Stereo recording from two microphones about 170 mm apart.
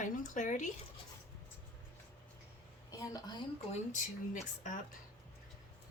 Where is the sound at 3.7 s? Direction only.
45° left (ahead or behind).